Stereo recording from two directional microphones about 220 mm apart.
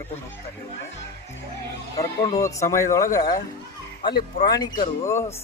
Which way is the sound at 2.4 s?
15° left (ahead or behind).